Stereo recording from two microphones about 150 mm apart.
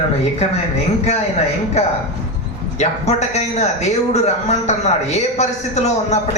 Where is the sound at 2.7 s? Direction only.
50° left (ahead or behind).